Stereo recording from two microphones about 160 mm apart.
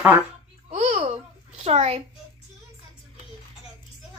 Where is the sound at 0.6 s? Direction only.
45° right (ahead or behind).